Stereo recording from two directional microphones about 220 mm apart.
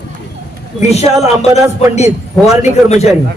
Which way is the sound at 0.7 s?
30° left (ahead or behind).